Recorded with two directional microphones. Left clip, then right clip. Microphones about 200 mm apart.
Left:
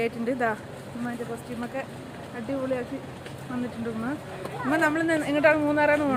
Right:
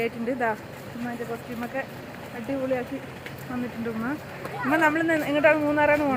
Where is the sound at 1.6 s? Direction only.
15° right (ahead or behind).